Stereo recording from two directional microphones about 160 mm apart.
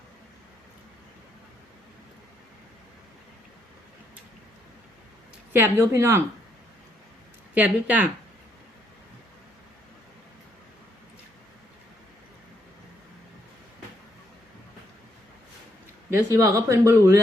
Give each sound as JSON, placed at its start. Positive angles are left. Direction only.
{"t": 5.5, "sound": "speech", "side_deg": -15}
{"t": 7.5, "sound": "speech", "side_deg": -10}
{"t": 16.0, "sound": "speech", "side_deg": -20}